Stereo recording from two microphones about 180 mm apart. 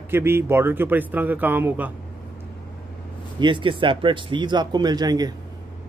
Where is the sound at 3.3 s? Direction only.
25° right (ahead or behind).